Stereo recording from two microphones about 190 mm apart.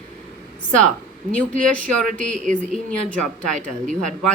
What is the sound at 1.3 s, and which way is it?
Speech, 5° left (ahead or behind).